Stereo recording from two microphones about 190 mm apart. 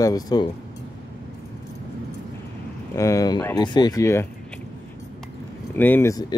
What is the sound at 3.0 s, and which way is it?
Speech, 15° left (ahead or behind).